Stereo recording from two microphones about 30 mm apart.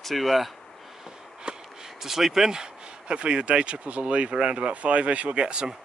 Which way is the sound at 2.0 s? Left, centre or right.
Centre.